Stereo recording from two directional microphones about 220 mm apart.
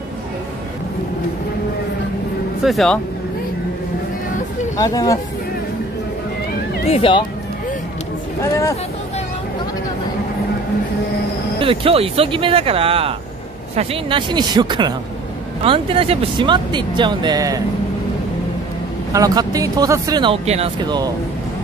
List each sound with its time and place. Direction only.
2.6 s speech: centre (ahead or behind)
4.7 s speech: 15° left (ahead or behind)
6.9 s speech: 25° left (ahead or behind)
8.4 s speech: 15° left (ahead or behind)
11.6 s speech: 25° right (ahead or behind)
19.1 s speech: 15° right (ahead or behind)